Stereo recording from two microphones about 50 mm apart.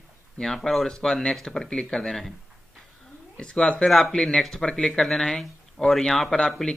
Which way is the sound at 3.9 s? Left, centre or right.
Centre.